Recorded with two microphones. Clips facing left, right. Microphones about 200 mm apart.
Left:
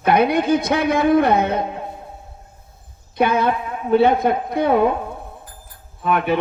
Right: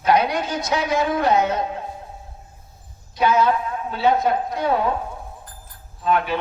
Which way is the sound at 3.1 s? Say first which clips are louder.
Even; 55° left (ahead or behind).